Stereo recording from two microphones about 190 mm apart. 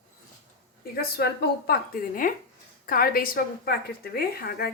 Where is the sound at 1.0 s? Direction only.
55° left (ahead or behind).